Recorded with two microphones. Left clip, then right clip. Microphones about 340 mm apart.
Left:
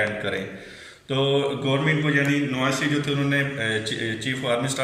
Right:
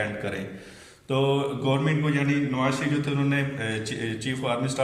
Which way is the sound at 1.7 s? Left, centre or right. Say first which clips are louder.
Left 3 dB; right.